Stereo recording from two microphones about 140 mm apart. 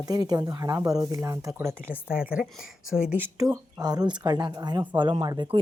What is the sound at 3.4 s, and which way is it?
Speech, 25° right (ahead or behind).